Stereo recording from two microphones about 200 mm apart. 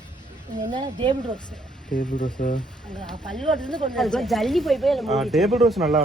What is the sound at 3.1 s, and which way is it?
Speech, centre (ahead or behind).